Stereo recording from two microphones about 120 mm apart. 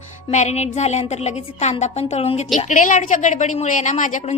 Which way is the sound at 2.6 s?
90° left.